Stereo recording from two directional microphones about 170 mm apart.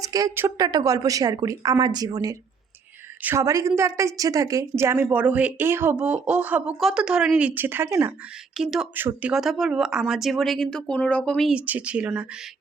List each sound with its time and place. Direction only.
0.0 s a woman's voice: 20° right (ahead or behind)
8.5 s speech: centre (ahead or behind)